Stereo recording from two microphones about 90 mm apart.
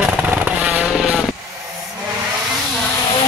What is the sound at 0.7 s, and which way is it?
Vehicle, 5° right (ahead or behind).